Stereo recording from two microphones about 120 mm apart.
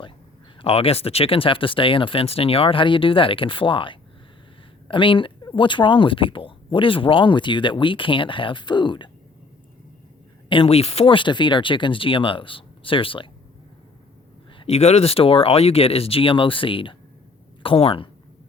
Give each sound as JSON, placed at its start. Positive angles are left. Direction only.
{"t": 0.6, "sound": "speech", "side_deg": 55}
{"t": 10.5, "sound": "speech", "side_deg": 50}
{"t": 14.6, "sound": "speech", "side_deg": 60}